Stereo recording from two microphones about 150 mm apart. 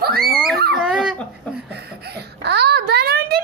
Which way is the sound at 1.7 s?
90° right.